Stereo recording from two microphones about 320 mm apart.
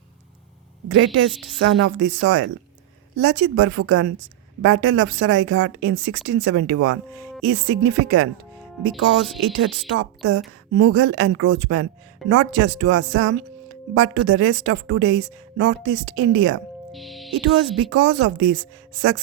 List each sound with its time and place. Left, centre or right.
0.9 s speech: right
1.3 s speech: centre
1.5 s a woman's voice: right
8.9 s speech: centre
9.6 s a woman's voice: right
16.9 s speech: centre
17.7 s a woman's voice: right